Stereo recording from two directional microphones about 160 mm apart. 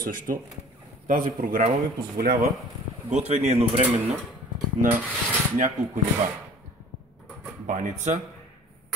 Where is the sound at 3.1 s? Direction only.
45° right (ahead or behind).